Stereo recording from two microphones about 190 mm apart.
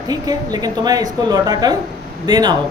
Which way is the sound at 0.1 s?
20° right (ahead or behind).